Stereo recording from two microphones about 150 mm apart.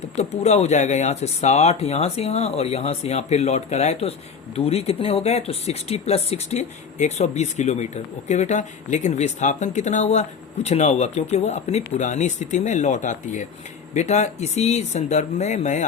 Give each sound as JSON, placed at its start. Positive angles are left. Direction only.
{"t": 0.2, "sound": "speech", "side_deg": 45}